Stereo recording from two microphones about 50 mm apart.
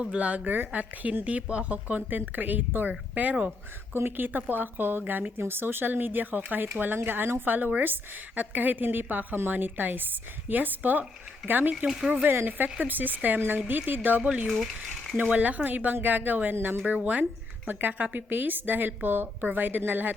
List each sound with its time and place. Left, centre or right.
0.0 s speech: right
3.9 s a woman's voice: right
4.3 s a woman's voice: right
11.9 s speech: centre
12.5 s a woman's voice: right
14.4 s speech: centre
15.1 s a woman's voice: right